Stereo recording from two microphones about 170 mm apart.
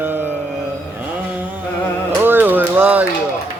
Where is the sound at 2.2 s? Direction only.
10° right (ahead or behind).